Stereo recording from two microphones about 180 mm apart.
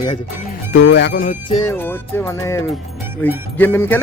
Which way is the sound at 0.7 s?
80° left.